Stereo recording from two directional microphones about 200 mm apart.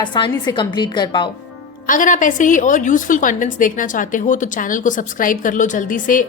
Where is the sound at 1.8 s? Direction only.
40° left (ahead or behind).